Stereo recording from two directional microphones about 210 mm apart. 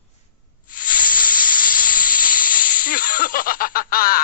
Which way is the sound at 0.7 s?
40° left (ahead or behind).